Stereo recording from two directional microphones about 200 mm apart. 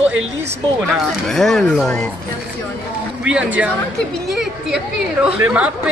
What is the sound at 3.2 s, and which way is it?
Speech, 5° right (ahead or behind).